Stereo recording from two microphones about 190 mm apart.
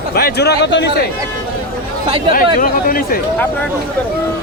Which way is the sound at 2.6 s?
50° left (ahead or behind).